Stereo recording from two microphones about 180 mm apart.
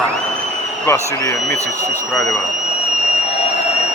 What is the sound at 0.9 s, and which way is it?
Speech, 15° left (ahead or behind).